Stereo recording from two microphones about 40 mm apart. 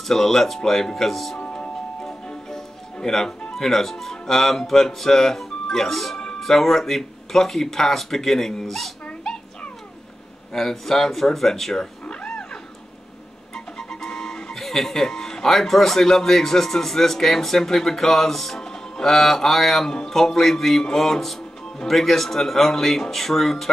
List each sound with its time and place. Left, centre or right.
0.1 s speech: centre
2.0 s music: centre
3.5 s speech: centre
10.5 s speech: centre
12.1 s wild animals: left
13.7 s speech: centre
18.6 s music: centre
19.1 s speech: centre